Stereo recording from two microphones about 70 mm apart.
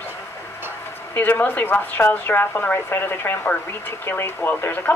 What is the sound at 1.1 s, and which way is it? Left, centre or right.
A woman's voice, left.